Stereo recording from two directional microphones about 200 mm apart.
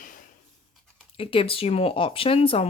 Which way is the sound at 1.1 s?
25° left (ahead or behind).